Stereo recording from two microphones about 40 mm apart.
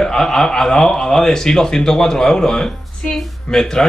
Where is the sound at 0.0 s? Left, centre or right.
Centre.